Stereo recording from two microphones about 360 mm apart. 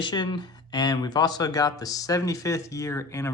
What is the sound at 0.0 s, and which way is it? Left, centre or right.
Speech, centre.